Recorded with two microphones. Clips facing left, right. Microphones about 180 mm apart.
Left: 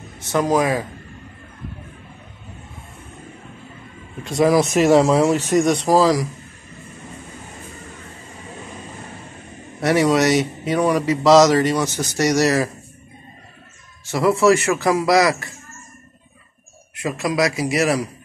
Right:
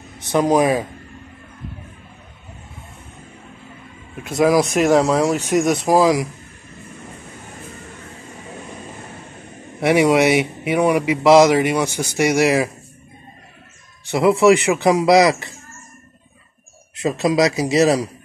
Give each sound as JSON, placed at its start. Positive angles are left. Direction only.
{"t": 0.2, "sound": "speech", "side_deg": -15}
{"t": 4.4, "sound": "speech", "side_deg": 0}
{"t": 5.9, "sound": "speech", "side_deg": -15}
{"t": 9.8, "sound": "speech", "side_deg": -15}
{"t": 14.1, "sound": "speech", "side_deg": -15}
{"t": 17.0, "sound": "speech", "side_deg": -20}